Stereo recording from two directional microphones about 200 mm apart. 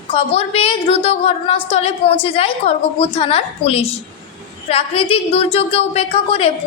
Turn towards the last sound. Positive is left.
turn(degrees=30)  # may be behind; listen again after turning